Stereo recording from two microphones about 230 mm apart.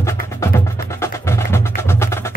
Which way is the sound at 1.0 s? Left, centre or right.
Centre.